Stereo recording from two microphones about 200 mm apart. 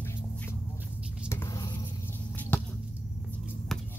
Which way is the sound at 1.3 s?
15° left (ahead or behind).